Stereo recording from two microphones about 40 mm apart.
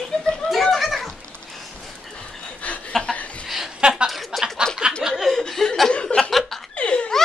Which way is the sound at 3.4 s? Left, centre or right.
Centre.